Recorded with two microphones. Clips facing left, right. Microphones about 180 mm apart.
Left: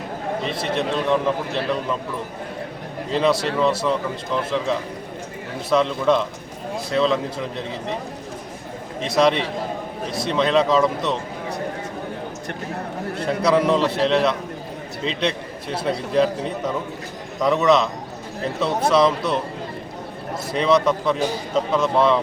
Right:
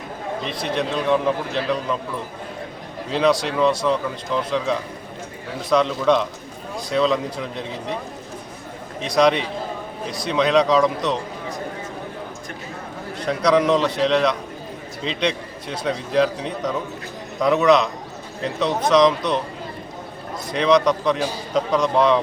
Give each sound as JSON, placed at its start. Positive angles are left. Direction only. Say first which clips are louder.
{"t": 0.6, "sound": "a man's voice", "louder": "right 1 dB", "side_deg": 0}
{"t": 3.1, "sound": "a man's voice", "louder": "right 1 dB", "side_deg": 0}
{"t": 9.0, "sound": "a man's voice", "louder": "right 1 dB", "side_deg": 0}
{"t": 13.2, "sound": "a man's voice", "louder": "right 1 dB", "side_deg": 5}
{"t": 18.9, "sound": "speech", "louder": "right 2 dB", "side_deg": 5}
{"t": 20.5, "sound": "a man's voice", "louder": "right 1 dB", "side_deg": 5}